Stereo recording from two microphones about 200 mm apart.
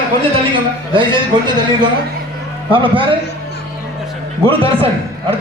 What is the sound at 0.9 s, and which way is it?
Speech, 25° right (ahead or behind).